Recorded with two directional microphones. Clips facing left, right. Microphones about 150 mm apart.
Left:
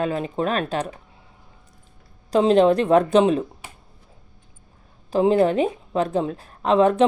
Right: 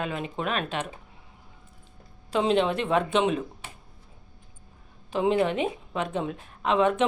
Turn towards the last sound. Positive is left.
turn(degrees=35)  # may be behind; listen again after turning